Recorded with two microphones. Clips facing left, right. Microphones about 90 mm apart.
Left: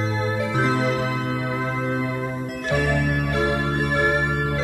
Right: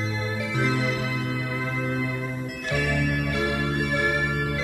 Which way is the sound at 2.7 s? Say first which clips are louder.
Left 3 dB; 35° left (ahead or behind).